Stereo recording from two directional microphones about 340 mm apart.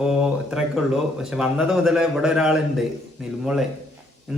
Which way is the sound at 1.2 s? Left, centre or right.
Centre.